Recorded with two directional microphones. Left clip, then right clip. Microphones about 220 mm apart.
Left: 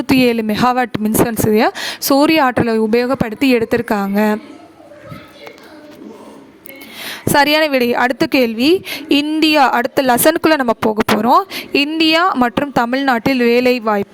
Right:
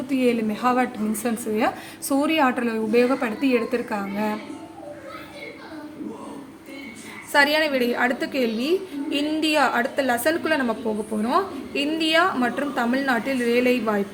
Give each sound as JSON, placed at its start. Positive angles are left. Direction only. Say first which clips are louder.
{"t": 0.1, "sound": "a woman's voice", "louder": "left 9 dB", "side_deg": 50}
{"t": 7.1, "sound": "a woman's voice", "louder": "left 7 dB", "side_deg": 55}